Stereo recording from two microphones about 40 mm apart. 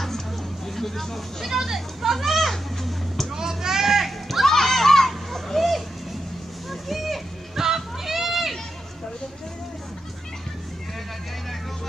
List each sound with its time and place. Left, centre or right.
0.7 s speech: centre
1.5 s children playing: centre
3.3 s children playing: centre
6.7 s a sound: centre